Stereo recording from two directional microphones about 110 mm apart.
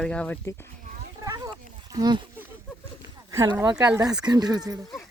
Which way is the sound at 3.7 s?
35° right (ahead or behind).